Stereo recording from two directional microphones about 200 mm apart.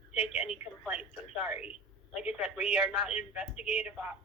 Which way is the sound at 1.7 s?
30° left (ahead or behind).